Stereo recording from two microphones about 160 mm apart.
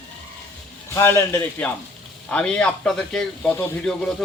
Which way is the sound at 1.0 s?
15° left (ahead or behind).